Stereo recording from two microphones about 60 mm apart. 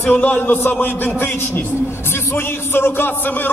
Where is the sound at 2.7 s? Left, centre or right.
Left.